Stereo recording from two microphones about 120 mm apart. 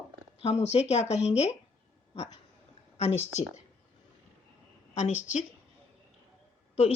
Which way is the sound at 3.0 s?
55° left (ahead or behind).